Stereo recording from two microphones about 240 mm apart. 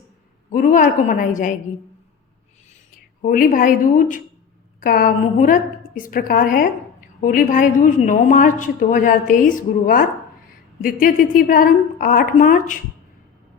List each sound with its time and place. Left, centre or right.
0.5 s a woman's voice: left
3.2 s a woman's voice: left